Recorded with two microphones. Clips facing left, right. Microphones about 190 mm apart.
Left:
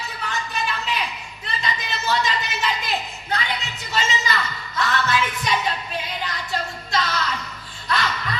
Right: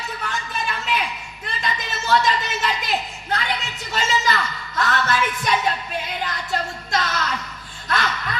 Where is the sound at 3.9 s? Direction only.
45° right (ahead or behind).